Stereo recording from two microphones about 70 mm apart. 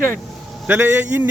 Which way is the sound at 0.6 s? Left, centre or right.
Right.